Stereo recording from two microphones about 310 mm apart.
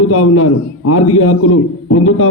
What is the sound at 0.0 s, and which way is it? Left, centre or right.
A man's voice, left.